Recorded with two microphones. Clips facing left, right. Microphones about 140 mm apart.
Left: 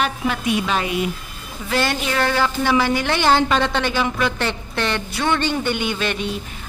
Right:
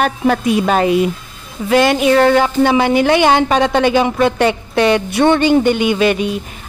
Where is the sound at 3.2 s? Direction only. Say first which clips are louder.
Right 5 dB; 60° right (ahead or behind).